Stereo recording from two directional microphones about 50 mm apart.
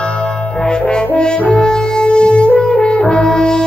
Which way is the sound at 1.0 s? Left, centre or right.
Centre.